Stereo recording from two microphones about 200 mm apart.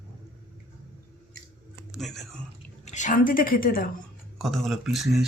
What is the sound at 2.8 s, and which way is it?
A woman's voice, 35° left (ahead or behind).